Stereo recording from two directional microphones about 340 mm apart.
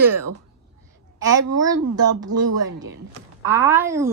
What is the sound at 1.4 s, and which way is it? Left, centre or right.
Speech, right.